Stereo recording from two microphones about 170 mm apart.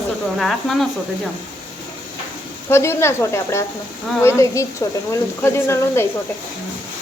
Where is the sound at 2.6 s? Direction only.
15° left (ahead or behind).